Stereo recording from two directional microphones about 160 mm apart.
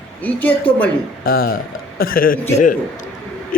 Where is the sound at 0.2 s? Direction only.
10° left (ahead or behind).